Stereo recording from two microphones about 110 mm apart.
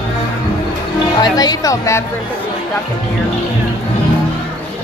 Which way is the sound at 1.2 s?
35° left (ahead or behind).